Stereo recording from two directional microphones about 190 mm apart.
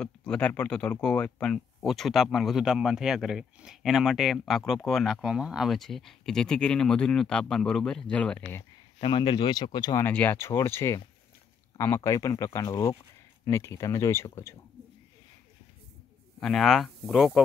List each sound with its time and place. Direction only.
0.0 s speech: 5° left (ahead or behind)
9.0 s speech: 25° left (ahead or behind)
10.0 s speech: 10° left (ahead or behind)
16.3 s speech: centre (ahead or behind)